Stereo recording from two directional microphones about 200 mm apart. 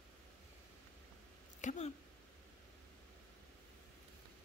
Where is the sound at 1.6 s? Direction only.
35° left (ahead or behind).